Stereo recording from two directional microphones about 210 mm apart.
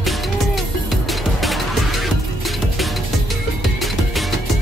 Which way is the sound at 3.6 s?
Centre (ahead or behind).